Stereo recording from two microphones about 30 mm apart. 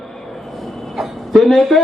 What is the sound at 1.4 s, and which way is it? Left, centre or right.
Speech, centre.